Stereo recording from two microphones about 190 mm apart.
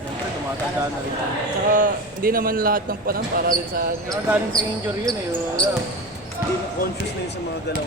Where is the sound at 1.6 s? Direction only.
45° right (ahead or behind).